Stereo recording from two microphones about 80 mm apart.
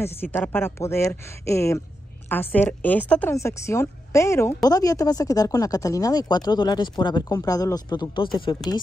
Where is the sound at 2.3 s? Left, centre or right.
Left.